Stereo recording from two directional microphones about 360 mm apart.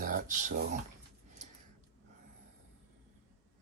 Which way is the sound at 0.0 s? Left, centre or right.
Right.